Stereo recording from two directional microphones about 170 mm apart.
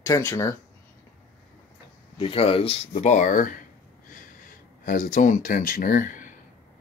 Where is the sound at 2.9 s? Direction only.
45° left (ahead or behind).